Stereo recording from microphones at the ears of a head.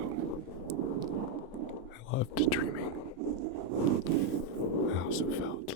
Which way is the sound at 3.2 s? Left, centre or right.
Right.